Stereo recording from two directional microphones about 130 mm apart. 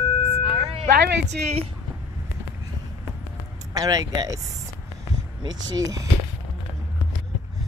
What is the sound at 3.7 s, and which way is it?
Speech, 25° right (ahead or behind).